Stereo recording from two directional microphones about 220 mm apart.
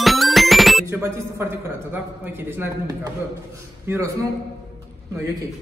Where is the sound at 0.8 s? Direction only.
10° right (ahead or behind).